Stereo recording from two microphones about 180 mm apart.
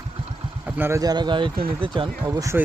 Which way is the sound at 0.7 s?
10° right (ahead or behind).